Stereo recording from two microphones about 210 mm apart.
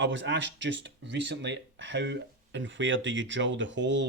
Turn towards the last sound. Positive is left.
turn(degrees=-60)  # may be behind; listen again after turning